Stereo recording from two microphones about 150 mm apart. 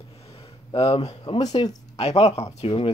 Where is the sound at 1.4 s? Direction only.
25° left (ahead or behind).